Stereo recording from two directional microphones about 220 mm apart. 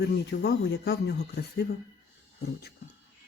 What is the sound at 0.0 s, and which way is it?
Speech, 50° left (ahead or behind).